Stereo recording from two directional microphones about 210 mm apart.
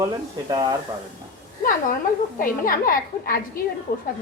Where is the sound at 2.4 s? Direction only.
40° left (ahead or behind).